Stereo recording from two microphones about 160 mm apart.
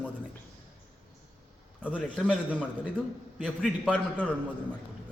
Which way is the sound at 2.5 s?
10° left (ahead or behind).